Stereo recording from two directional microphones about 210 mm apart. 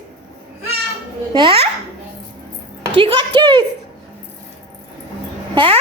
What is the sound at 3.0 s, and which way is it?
Speech, 25° right (ahead or behind).